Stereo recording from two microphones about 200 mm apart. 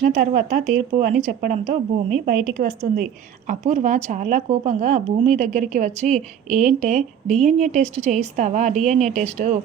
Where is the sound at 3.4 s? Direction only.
40° right (ahead or behind).